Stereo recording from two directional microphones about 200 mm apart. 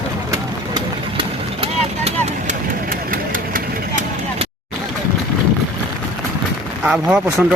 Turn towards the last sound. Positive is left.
turn(degrees=-5)  # may be behind; listen again after turning